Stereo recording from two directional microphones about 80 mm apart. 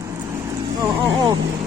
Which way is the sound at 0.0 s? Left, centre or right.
Right.